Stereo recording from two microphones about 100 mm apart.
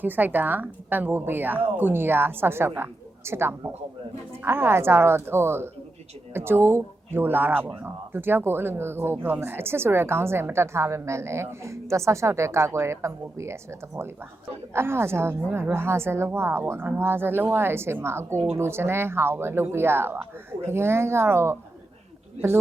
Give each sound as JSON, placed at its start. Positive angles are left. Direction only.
{"t": 0.0, "sound": "speech", "side_deg": -20}